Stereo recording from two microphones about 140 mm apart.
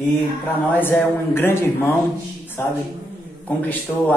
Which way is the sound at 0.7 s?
15° left (ahead or behind).